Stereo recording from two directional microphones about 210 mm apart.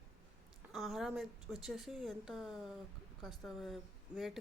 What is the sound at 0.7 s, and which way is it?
A woman's voice, centre (ahead or behind).